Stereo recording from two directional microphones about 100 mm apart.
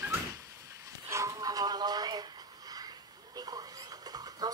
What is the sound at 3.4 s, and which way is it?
Rodents, 45° right (ahead or behind).